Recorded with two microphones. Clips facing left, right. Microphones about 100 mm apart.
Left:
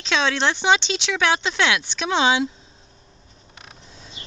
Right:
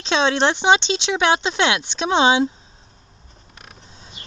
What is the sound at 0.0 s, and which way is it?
Speech, 25° right (ahead or behind).